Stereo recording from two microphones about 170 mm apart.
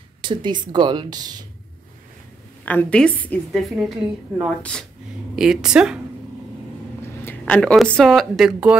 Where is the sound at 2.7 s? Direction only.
10° left (ahead or behind).